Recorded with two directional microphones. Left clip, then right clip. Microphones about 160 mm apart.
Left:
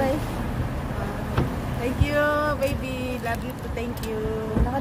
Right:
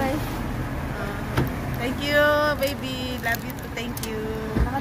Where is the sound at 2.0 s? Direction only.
30° left (ahead or behind).